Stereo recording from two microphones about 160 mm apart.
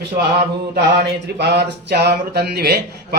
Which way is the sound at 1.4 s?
90° right.